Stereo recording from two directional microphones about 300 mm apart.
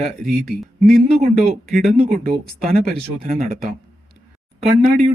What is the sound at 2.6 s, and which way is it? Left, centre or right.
Speech, right.